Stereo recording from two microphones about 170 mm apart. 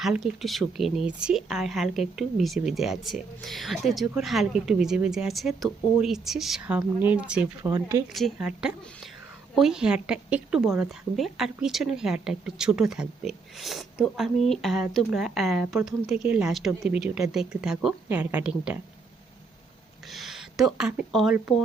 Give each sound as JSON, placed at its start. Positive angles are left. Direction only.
{"t": 0.0, "sound": "a woman's voice", "side_deg": 0}
{"t": 7.6, "sound": "speech", "side_deg": -15}
{"t": 8.1, "sound": "a woman's voice", "side_deg": 0}
{"t": 20.1, "sound": "speech", "side_deg": 0}